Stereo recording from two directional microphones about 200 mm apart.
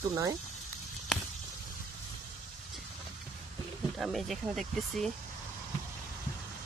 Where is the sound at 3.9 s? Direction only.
Centre (ahead or behind).